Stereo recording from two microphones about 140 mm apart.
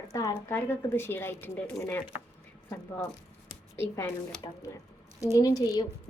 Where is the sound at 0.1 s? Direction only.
25° left (ahead or behind).